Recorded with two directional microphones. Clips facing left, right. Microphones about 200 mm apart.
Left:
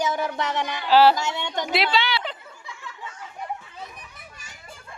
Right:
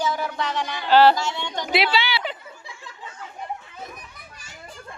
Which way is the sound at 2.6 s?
30° right (ahead or behind).